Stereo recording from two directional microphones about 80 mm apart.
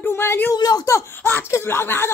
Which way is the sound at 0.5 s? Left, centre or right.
Left.